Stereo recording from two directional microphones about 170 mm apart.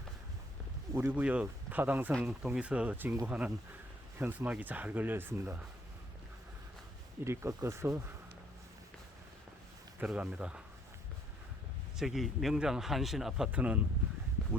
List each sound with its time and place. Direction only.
0.9 s speech: 10° right (ahead or behind)
7.3 s speech: 15° right (ahead or behind)
10.0 s speech: 5° right (ahead or behind)
11.9 s speech: centre (ahead or behind)